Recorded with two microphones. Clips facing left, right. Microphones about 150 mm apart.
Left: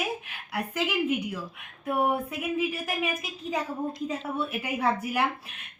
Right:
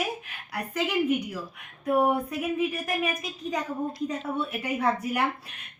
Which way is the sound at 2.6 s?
5° left (ahead or behind).